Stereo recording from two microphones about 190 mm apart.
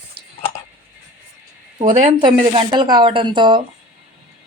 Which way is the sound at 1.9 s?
25° right (ahead or behind).